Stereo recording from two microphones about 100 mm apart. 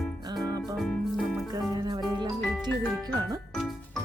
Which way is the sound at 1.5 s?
45° right (ahead or behind).